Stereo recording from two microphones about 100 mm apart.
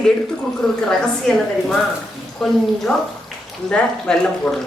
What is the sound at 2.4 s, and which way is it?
Stir, 5° left (ahead or behind).